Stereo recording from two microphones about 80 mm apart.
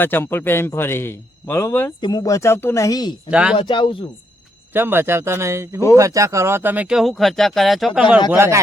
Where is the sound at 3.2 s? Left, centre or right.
Centre.